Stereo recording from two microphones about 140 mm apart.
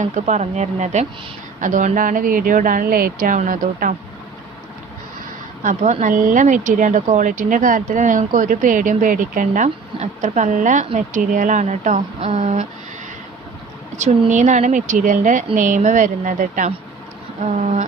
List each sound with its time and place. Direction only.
0.0 s speech: 55° right (ahead or behind); by 3.9 s 80° right
5.6 s speech: 60° right (ahead or behind)
9.6 s speech: 55° right (ahead or behind)
12.2 s speech: 45° right (ahead or behind)
14.0 s speech: 60° right (ahead or behind)